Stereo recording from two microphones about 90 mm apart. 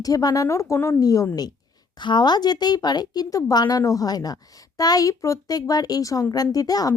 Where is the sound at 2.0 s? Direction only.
55° left (ahead or behind).